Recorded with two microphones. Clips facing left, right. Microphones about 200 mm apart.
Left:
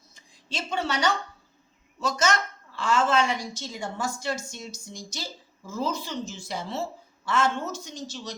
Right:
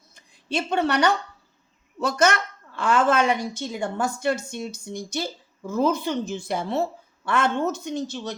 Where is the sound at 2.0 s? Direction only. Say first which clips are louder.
Right 4 dB; 60° right (ahead or behind).